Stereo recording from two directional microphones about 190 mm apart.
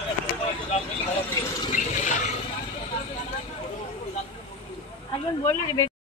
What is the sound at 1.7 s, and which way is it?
Water, 40° left (ahead or behind).